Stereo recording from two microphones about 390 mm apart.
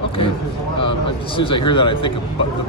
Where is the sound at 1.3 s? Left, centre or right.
Centre.